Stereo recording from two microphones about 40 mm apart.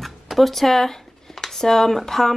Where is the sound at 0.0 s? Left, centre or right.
Centre.